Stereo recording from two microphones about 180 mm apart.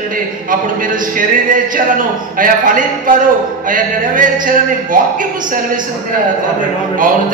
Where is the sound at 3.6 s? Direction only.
50° right (ahead or behind).